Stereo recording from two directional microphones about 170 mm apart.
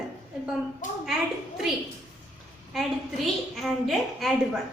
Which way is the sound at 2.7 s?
Centre (ahead or behind).